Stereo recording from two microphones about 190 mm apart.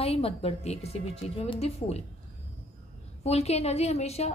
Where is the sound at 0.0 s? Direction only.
30° left (ahead or behind).